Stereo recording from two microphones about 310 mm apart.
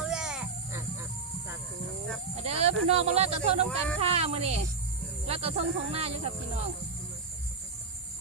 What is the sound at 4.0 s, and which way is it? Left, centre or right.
Speech, centre.